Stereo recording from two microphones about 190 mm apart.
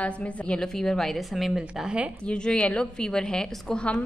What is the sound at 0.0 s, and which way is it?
A woman's voice, 5° left (ahead or behind).